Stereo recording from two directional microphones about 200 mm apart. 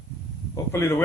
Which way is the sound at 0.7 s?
10° left (ahead or behind).